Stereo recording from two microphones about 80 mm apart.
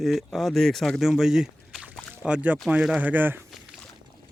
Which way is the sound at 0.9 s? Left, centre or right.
Centre.